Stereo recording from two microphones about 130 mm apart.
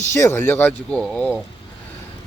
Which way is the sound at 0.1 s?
20° left (ahead or behind).